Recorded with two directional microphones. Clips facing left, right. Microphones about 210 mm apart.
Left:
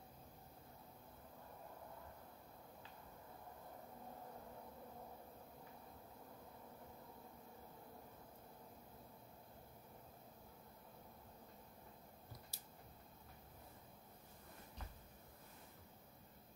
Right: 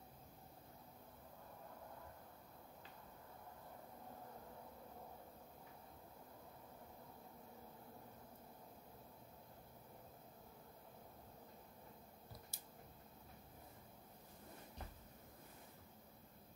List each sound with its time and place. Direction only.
12.5 s scissors: 50° right (ahead or behind)